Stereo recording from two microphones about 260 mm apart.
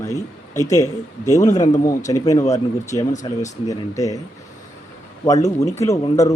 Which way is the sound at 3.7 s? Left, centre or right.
Centre.